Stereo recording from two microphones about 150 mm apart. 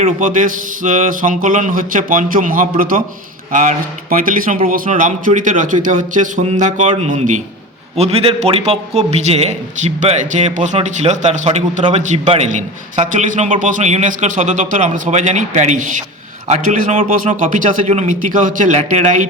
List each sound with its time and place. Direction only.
0.2 s a man's voice: 60° right (ahead or behind)